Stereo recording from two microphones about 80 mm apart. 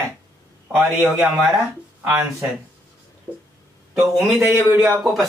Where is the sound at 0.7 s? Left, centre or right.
Centre.